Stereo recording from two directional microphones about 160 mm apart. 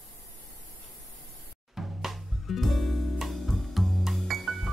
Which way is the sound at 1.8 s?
Centre (ahead or behind).